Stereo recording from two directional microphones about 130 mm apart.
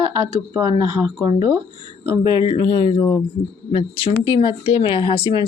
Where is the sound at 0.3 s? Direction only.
30° right (ahead or behind).